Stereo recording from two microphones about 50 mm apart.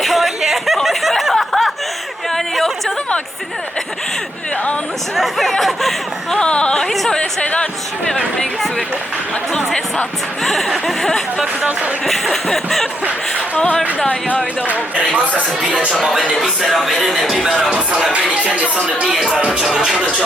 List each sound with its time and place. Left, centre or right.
0.0 s a sound: centre
1.2 s snicker: centre
5.1 s a sound: centre
6.4 s music: left
7.1 s speech: centre
10.4 s chuckle: centre
14.7 s speech: right
16.6 s chuckle: centre
18.4 s speech: right
19.0 s music: centre
19.4 s speech: centre
19.6 s music: centre